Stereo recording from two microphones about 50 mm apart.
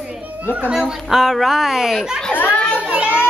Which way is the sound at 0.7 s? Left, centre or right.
Centre.